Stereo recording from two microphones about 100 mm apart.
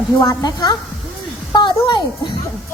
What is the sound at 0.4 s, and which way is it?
A woman's voice, 45° left (ahead or behind).